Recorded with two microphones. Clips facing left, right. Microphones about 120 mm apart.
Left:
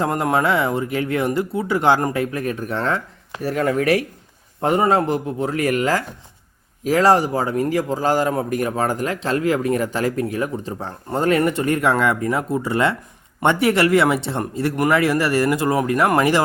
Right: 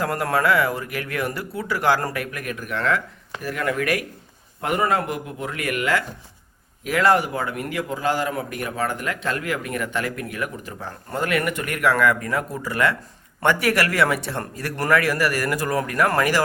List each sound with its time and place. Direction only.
0.0 s a man's voice: 20° left (ahead or behind)